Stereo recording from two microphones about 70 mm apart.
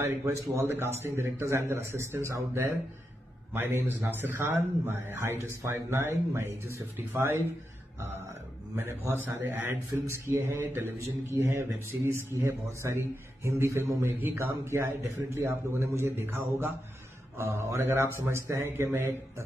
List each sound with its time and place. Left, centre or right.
0.0 s speech: right
3.5 s speech: right
8.7 s speech: right
10.0 s speech: right